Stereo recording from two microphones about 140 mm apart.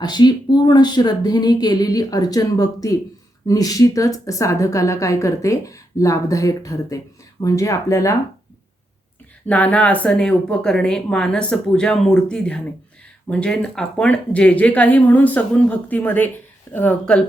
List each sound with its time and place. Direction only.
0.0 s a woman's voice: 30° left (ahead or behind)
9.5 s speech: 10° left (ahead or behind)